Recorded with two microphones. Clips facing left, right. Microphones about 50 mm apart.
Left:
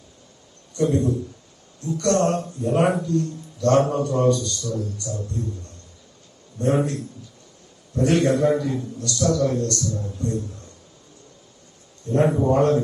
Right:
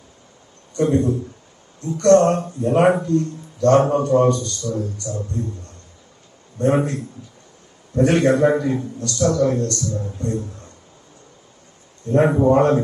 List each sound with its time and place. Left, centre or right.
0.8 s speech: right
6.6 s speech: right
12.0 s speech: right